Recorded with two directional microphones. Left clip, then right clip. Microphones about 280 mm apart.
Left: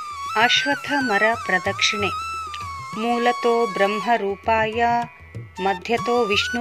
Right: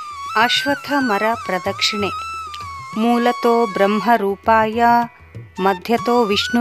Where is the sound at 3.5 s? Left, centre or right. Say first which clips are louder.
Right 4 dB; centre.